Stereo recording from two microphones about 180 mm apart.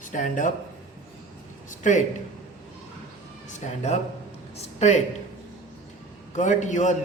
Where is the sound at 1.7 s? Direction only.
45° left (ahead or behind).